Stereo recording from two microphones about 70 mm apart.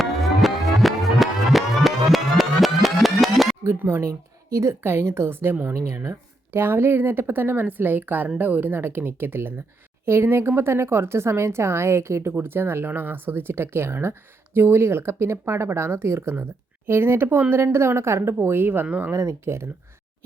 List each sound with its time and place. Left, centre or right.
0.0 s music: centre
3.8 s speech: right
19.1 s speech: right